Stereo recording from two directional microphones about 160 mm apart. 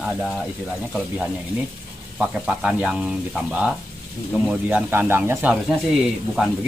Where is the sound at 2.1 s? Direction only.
5° right (ahead or behind).